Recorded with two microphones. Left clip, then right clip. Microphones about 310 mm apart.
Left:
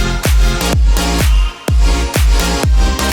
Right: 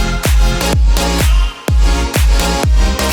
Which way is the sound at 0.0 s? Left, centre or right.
Centre.